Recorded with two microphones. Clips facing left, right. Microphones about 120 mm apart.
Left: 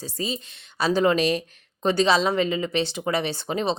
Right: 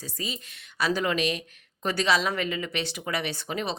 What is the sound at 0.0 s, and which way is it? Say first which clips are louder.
A woman's voice: left 6 dB; 30° left (ahead or behind).